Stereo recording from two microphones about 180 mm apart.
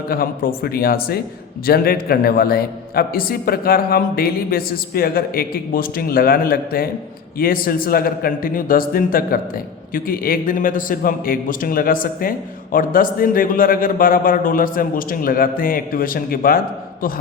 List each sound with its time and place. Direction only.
0.1 s a man's voice: 55° left (ahead or behind)